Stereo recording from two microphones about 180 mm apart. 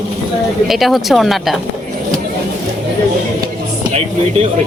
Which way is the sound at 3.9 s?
35° right (ahead or behind).